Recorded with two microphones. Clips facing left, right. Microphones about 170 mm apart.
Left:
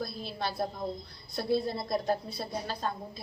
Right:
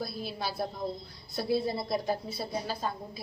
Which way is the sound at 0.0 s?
5° right (ahead or behind).